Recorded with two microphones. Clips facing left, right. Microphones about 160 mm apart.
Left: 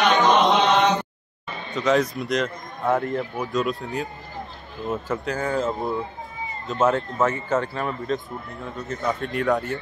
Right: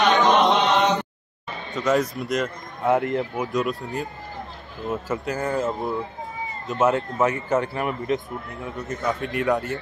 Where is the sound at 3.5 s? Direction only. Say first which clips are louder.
Left 2 dB; centre (ahead or behind).